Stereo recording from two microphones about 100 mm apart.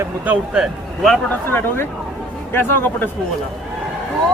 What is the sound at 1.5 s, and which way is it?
A man's voice, 25° left (ahead or behind).